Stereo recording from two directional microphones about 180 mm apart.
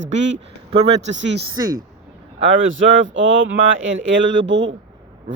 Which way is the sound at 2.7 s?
90° right.